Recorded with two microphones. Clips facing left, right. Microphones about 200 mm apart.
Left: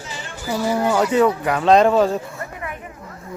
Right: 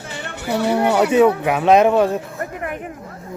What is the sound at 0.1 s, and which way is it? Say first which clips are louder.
Speech: right 3 dB; 65° right (ahead or behind).